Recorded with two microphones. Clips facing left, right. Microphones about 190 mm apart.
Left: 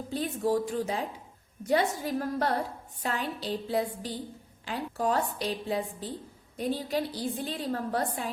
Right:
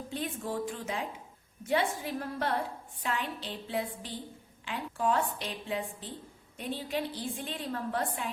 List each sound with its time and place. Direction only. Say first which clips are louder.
0.1 s a woman's voice: left 8 dB; 35° left (ahead or behind)